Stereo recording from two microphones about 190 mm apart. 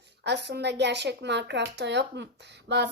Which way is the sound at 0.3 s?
65° right (ahead or behind).